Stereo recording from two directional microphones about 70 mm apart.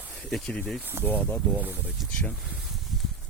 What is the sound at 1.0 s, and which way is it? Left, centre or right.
Speech, left.